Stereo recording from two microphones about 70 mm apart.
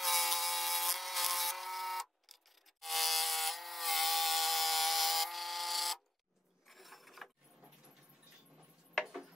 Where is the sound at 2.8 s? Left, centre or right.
Centre.